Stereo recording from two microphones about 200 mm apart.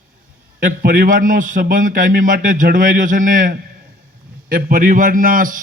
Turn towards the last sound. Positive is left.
turn(degrees=-45)  # may be behind; listen again after turning